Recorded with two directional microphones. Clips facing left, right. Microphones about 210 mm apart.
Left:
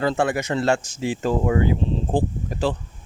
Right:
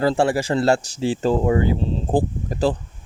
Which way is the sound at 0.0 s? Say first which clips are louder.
Right 3 dB; 30° right (ahead or behind).